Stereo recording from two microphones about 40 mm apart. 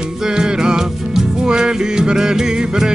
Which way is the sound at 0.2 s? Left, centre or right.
Centre.